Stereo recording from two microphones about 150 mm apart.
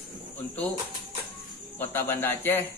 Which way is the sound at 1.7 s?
15° left (ahead or behind).